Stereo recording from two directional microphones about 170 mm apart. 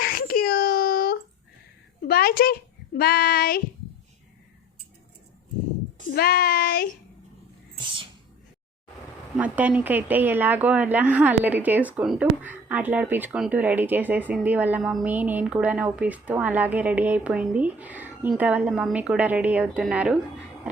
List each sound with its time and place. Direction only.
0.0 s a sound: 60° left (ahead or behind)
2.0 s a child's voice: 65° left (ahead or behind)
6.1 s child singing: 70° left (ahead or behind)
9.4 s a woman's voice: 10° right (ahead or behind)